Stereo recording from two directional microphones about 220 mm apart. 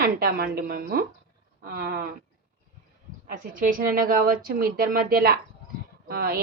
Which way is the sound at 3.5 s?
40° right (ahead or behind).